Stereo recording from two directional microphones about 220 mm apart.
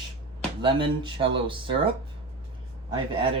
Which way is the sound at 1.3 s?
25° right (ahead or behind).